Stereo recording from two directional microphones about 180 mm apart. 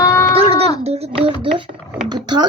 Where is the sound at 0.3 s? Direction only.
35° right (ahead or behind).